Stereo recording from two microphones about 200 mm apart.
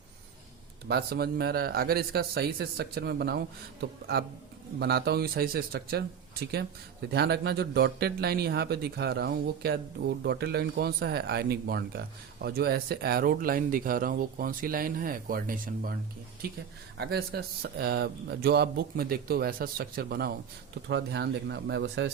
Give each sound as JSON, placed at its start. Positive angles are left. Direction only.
{"t": 0.9, "sound": "speech", "side_deg": -50}
{"t": 7.1, "sound": "speech", "side_deg": -55}
{"t": 17.0, "sound": "speech", "side_deg": -50}